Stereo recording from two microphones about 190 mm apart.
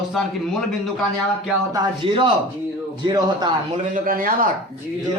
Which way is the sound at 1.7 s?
25° right (ahead or behind).